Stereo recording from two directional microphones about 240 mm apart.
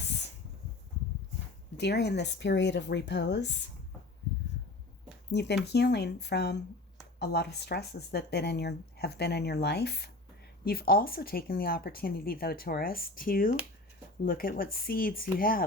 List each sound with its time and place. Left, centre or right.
1.7 s speech: left
5.3 s speech: left